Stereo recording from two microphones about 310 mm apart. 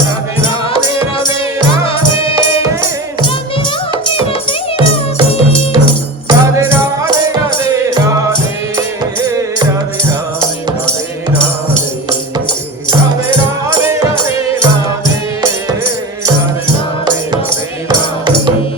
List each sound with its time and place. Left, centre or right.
4.0 s music: centre
6.2 s music: centre
13.8 s music: centre
17.8 s music: centre